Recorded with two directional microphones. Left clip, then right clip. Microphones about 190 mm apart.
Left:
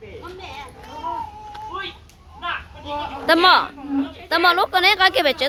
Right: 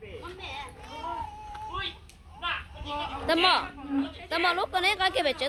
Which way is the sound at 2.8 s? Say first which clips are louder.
Left 9 dB; 15° left (ahead or behind).